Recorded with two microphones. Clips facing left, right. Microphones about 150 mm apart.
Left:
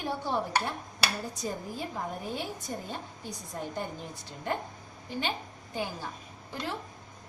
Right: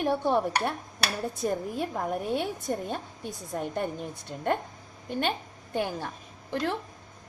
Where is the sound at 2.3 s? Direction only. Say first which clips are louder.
Right 7 dB; 60° right (ahead or behind).